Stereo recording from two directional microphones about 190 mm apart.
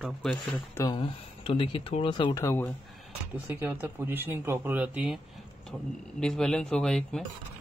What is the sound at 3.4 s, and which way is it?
Speech, 10° right (ahead or behind).